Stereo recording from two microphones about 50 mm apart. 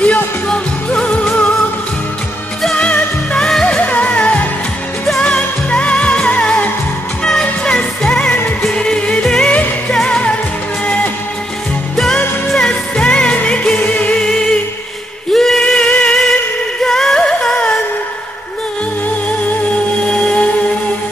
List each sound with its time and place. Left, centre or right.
0.0 s music: left
3.3 s music: centre
3.7 s music: left
7.2 s music: centre
9.5 s music: left
12.5 s music: centre
14.2 s music: centre
15.3 s a sound: centre
16.8 s music: centre
20.1 s music: left